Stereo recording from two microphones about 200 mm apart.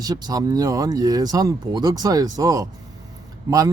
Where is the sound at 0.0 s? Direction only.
20° right (ahead or behind).